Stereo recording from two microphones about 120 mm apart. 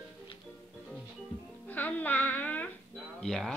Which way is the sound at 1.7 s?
15° left (ahead or behind).